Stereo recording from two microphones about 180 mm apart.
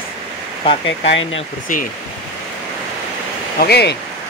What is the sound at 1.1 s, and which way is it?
Speech, 90° left.